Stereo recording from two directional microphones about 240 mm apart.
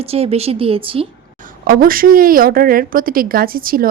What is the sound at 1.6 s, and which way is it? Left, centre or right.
A woman's voice, right.